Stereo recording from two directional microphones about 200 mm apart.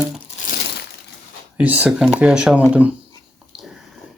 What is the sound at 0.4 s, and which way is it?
Crumpling, 55° left (ahead or behind).